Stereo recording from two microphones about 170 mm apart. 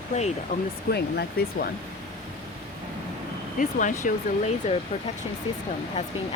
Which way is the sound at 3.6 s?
50° left (ahead or behind).